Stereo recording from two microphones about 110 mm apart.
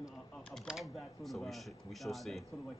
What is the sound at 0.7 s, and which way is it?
Speech, centre (ahead or behind).